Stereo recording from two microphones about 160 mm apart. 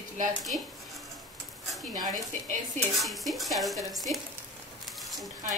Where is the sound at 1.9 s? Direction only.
25° right (ahead or behind).